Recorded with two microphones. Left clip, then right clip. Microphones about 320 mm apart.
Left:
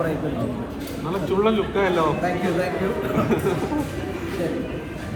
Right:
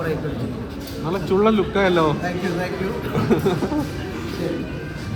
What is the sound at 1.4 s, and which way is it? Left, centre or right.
Speech, right.